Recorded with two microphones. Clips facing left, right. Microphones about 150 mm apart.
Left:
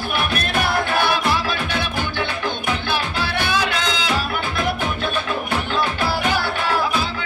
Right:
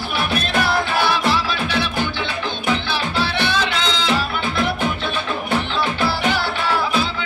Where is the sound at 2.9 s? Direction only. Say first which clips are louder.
Right 1 dB; 50° left (ahead or behind).